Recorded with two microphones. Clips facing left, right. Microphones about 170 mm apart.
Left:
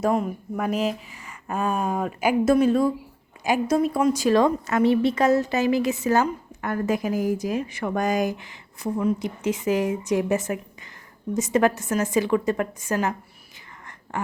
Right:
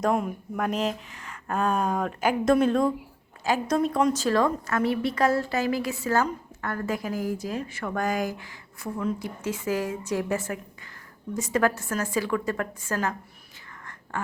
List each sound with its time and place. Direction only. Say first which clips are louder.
0.0 s a woman's voice: left 2 dB; centre (ahead or behind); by 13.1 s 20° left (ahead or behind)